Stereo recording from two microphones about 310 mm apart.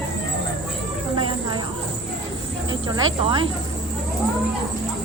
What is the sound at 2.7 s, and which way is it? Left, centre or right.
Speech, centre.